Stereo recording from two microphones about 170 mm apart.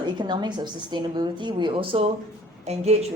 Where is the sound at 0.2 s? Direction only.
25° right (ahead or behind).